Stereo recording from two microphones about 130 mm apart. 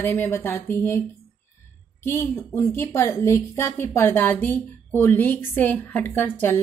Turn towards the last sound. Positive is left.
turn(degrees=15)  # may be behind; listen again after turning